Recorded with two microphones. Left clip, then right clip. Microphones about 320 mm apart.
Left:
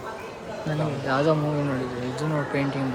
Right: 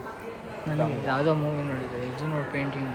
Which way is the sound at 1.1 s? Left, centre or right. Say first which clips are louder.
Left 4 dB; centre.